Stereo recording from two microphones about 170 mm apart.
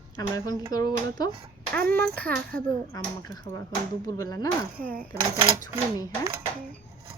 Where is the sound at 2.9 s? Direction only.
25° left (ahead or behind).